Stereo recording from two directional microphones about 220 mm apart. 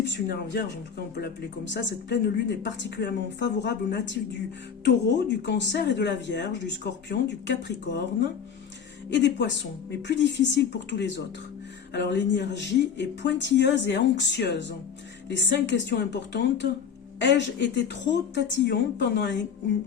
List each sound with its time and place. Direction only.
0.0 s speech: 50° left (ahead or behind)
1.7 s speech: 50° left (ahead or behind)
9.0 s speech: 50° left (ahead or behind)